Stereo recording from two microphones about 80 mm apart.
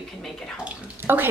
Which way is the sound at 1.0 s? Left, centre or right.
Right.